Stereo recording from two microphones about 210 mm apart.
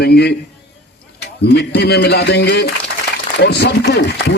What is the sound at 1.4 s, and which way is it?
Speech, 50° left (ahead or behind).